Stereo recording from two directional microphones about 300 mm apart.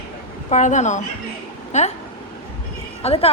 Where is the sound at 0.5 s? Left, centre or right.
Left.